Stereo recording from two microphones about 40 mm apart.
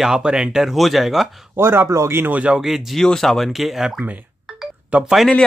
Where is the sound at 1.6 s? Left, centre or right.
Right.